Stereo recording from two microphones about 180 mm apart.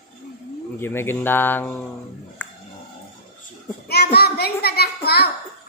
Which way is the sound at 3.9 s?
60° left (ahead or behind).